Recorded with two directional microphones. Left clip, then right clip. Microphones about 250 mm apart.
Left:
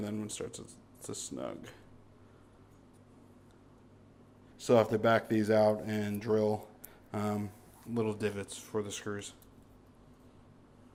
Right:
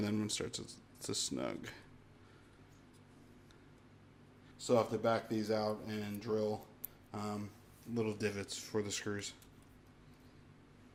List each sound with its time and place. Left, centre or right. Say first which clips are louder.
0.0 s speech: right 1 dB; right
4.5 s speech: left 6 dB; left
7.9 s speech: left 4 dB; centre